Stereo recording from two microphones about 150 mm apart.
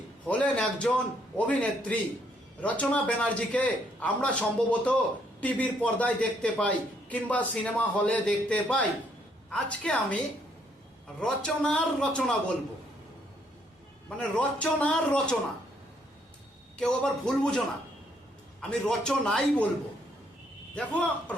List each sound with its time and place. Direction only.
0.3 s a man's voice: 10° left (ahead or behind)
11.2 s a man's voice: 5° left (ahead or behind)
14.2 s a man's voice: 10° left (ahead or behind)
16.7 s speech: 5° left (ahead or behind)
18.7 s speech: 5° left (ahead or behind)
20.7 s a man's voice: 10° left (ahead or behind)